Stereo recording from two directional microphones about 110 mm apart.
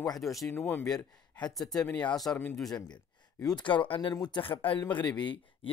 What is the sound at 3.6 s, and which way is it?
Speech, 50° left (ahead or behind).